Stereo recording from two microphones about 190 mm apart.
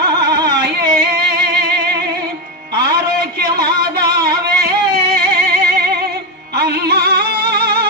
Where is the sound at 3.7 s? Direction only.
55° right (ahead or behind).